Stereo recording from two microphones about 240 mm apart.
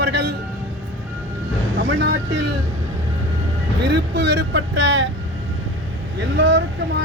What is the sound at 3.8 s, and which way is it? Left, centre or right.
Speech, right.